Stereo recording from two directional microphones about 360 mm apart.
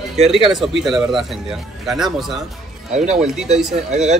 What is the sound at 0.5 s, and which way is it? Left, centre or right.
A man's voice, centre.